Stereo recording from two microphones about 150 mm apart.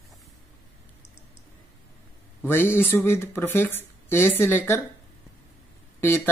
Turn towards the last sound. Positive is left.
turn(degrees=15)  # may be behind; listen again after turning